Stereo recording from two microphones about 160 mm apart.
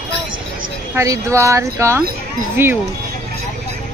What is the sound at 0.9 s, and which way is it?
Speech, 20° right (ahead or behind).